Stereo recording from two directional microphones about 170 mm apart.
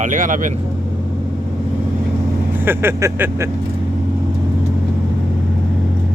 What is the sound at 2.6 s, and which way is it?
Speech, 15° right (ahead or behind).